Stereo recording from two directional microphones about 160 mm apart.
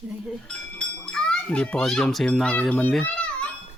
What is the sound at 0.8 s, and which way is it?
A child's voice, 5° left (ahead or behind).